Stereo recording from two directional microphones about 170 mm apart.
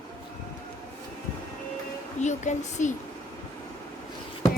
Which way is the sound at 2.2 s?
45° left (ahead or behind).